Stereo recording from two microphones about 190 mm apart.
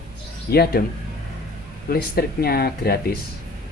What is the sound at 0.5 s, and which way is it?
Speech, 55° left (ahead or behind).